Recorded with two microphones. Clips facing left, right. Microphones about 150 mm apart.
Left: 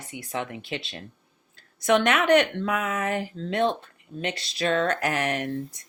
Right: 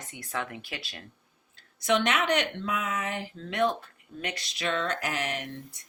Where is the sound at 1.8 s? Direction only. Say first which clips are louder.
Left 4 dB; 50° left (ahead or behind).